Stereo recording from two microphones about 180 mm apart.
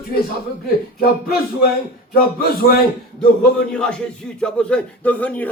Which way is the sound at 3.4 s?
5° left (ahead or behind).